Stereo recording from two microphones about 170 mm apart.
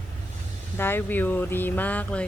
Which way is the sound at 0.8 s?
10° left (ahead or behind).